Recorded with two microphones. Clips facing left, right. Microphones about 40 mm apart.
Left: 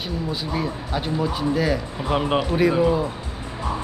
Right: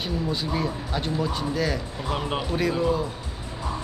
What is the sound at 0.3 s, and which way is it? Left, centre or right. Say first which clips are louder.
A man's voice: left 2 dB; centre.